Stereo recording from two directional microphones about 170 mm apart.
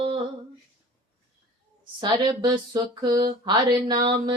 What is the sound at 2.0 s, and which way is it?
Music, 30° right (ahead or behind).